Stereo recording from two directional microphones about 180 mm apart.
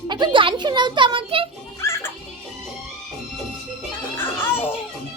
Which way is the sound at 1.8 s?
15° left (ahead or behind).